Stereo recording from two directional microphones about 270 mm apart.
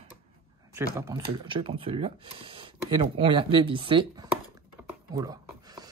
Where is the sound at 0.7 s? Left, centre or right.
Centre.